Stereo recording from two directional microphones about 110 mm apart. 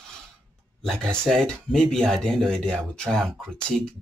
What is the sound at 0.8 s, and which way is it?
Speech, 5° left (ahead or behind).